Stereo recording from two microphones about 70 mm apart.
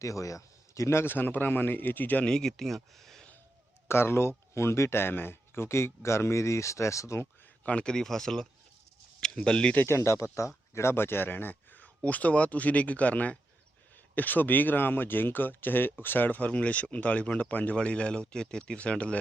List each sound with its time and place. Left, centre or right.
0.0 s speech: left
2.2 s speech: centre
3.8 s speech: left
7.6 s speech: centre
9.7 s speech: left; by 19.1 s centre